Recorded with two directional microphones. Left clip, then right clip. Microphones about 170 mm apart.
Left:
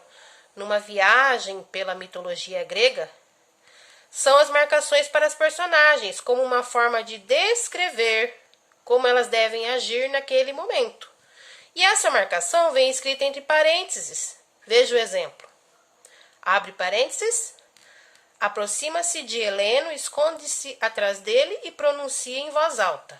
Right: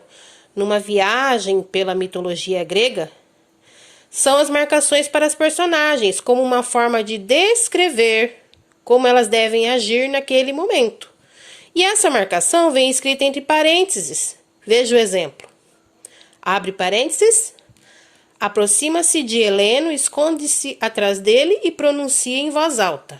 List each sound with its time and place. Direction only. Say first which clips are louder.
0.2 s a woman's voice: right 13 dB; 30° right (ahead or behind)